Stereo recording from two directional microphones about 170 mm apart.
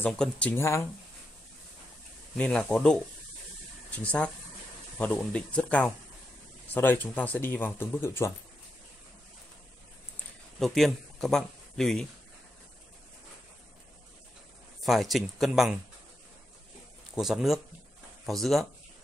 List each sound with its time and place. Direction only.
0.0 s speech: 5° left (ahead or behind)
2.3 s speech: 5° left (ahead or behind)
10.6 s speech: centre (ahead or behind)
14.9 s speech: centre (ahead or behind)
17.1 s speech: centre (ahead or behind)